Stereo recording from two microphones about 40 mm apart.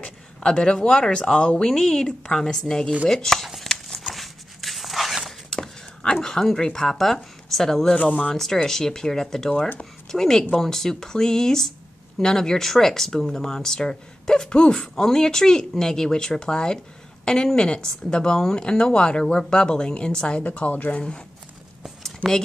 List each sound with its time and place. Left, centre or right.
0.0 s speech: left
3.6 s horse: centre
4.1 s dog: centre
6.2 s speech: centre
8.0 s speech: left
8.6 s a woman's voice: centre; by 21.0 s left
22.0 s a sound: centre